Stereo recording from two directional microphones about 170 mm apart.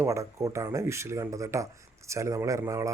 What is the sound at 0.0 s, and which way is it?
Speech, 15° right (ahead or behind).